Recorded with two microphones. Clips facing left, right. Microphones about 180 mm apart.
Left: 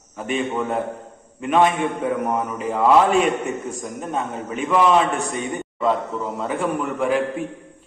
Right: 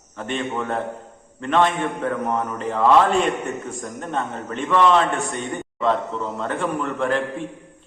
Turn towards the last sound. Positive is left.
turn(degrees=5)  # may be behind; listen again after turning